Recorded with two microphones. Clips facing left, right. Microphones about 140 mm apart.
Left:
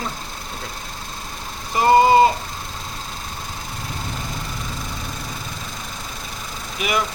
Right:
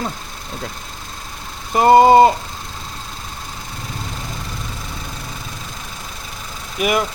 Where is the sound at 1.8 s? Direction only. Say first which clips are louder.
Right 4 dB; 45° right (ahead or behind).